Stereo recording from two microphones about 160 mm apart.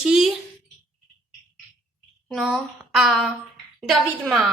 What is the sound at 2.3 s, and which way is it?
A woman's voice, centre (ahead or behind).